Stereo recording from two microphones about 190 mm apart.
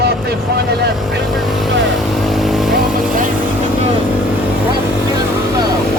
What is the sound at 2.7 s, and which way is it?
Vehicle, 45° right (ahead or behind).